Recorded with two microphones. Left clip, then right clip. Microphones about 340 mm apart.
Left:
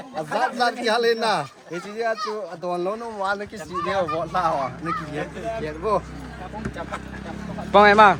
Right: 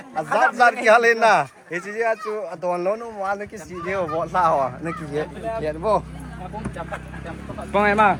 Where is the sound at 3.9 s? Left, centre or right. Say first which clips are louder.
Right 2 dB; centre.